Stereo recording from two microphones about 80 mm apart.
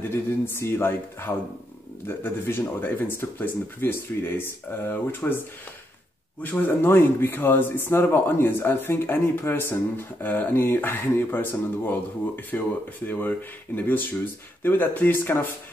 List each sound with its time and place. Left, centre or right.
0.1 s speech: left
6.4 s speech: left